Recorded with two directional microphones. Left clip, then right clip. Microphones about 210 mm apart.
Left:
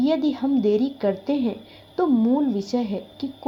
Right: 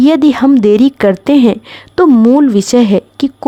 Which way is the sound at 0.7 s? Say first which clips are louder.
Right 13 dB; 90° right.